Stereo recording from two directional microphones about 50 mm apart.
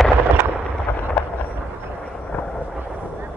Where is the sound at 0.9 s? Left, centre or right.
Left.